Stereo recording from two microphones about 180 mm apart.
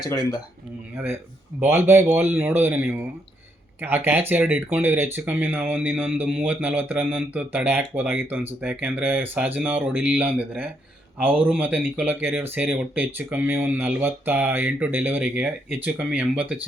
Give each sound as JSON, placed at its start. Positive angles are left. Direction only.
{"t": 0.1, "sound": "speech", "side_deg": 20}
{"t": 0.9, "sound": "speech", "side_deg": -10}